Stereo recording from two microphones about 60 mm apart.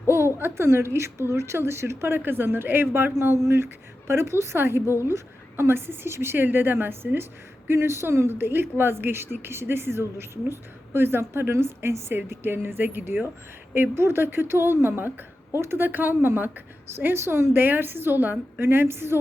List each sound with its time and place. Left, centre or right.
0.1 s a woman's voice: right
15.9 s a woman's voice: right